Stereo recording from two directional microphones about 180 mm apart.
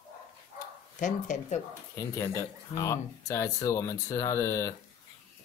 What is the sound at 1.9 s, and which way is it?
Speech, 15° left (ahead or behind).